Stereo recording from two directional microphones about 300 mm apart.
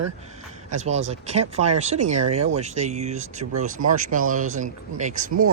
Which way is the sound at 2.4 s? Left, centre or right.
Right.